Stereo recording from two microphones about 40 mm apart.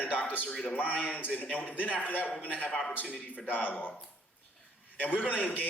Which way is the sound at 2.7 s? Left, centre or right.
Centre.